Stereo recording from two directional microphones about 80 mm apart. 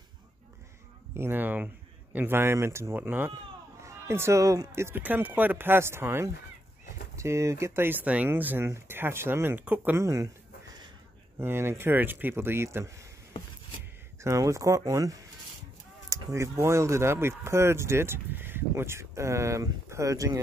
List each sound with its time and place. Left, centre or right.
1.1 s speech: right
3.8 s speech: right
10.0 s speech: right
11.3 s speech: right
14.2 s speech: right